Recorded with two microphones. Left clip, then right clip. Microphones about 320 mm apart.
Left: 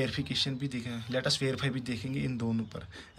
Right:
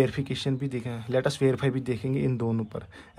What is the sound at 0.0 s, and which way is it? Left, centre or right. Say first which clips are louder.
Speech: right 4 dB; centre.